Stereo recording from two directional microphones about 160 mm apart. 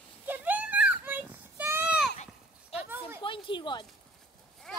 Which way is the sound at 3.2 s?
30° left (ahead or behind).